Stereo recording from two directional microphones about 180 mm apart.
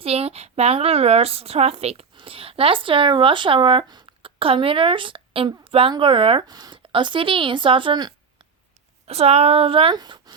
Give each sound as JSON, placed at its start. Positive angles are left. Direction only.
{"t": 0.0, "sound": "speech", "side_deg": -35}